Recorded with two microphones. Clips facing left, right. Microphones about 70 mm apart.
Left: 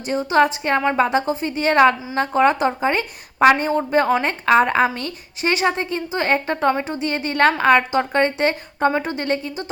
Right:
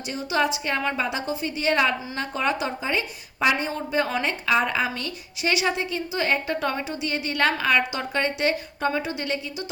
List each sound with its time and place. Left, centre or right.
0.1 s a woman's voice: left